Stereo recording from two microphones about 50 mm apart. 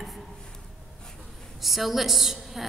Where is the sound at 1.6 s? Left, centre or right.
Centre.